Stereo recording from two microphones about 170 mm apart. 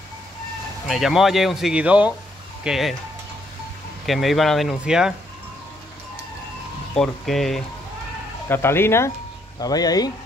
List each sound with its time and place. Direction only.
0.8 s speech: centre (ahead or behind)
4.0 s speech: centre (ahead or behind)
7.0 s speech: centre (ahead or behind)
8.5 s speech: 15° left (ahead or behind)